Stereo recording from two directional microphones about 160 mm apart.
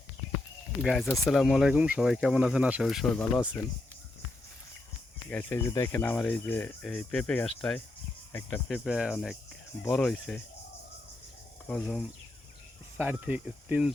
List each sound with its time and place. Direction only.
0.8 s speech: centre (ahead or behind)
5.3 s speech: 10° left (ahead or behind)
11.7 s speech: centre (ahead or behind)
13.0 s speech: 10° right (ahead or behind)